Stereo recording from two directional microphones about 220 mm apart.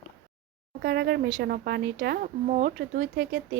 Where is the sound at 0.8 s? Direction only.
45° right (ahead or behind).